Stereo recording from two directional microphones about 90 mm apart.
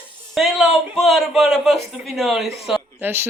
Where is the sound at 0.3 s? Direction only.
5° right (ahead or behind).